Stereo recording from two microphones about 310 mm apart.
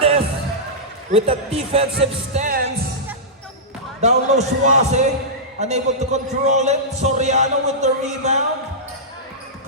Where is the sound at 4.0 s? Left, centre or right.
Right.